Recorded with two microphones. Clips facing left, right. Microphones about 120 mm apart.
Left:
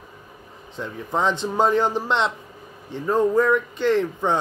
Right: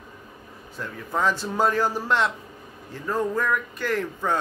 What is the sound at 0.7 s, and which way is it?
Speech, 20° left (ahead or behind).